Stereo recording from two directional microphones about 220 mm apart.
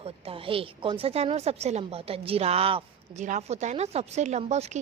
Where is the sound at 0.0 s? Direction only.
25° right (ahead or behind).